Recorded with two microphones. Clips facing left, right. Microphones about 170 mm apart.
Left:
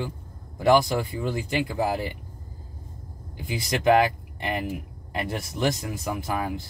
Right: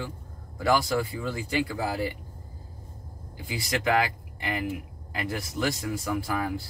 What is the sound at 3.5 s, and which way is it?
Speech, 25° left (ahead or behind).